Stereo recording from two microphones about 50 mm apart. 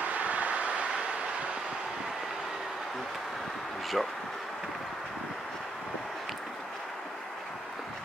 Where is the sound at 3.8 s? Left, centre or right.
Centre.